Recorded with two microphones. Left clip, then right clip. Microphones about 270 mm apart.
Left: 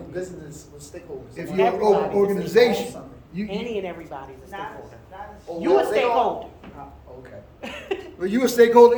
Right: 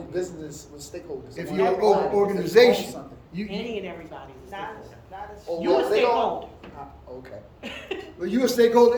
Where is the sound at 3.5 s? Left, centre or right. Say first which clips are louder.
Left 4 dB; left.